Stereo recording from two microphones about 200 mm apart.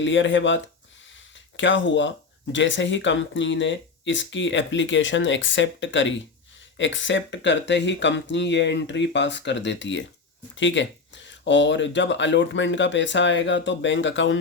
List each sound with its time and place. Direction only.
0.0 s speech: 65° left (ahead or behind)